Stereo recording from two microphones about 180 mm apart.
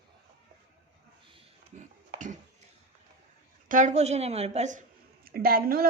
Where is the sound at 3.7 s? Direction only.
45° right (ahead or behind).